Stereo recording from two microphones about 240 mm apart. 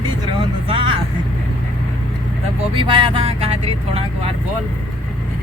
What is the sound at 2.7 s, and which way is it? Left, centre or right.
Vehicle, right.